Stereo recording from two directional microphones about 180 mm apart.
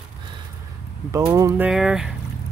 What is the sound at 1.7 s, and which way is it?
Speech, 5° right (ahead or behind).